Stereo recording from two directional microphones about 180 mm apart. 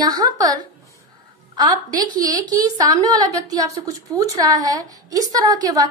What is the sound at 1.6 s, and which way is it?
A woman's voice, 20° right (ahead or behind).